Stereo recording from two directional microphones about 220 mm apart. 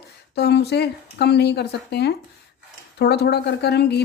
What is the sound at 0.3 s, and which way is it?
Speech, 50° left (ahead or behind).